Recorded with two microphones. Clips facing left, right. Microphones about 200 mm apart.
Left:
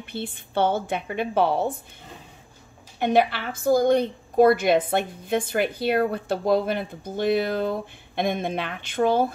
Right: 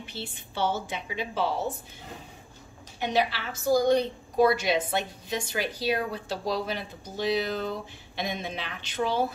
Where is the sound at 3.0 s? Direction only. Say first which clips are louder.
Left 6 dB; 55° left (ahead or behind).